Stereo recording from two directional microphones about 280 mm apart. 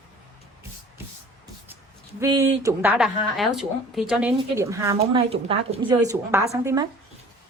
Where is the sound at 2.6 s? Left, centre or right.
Centre.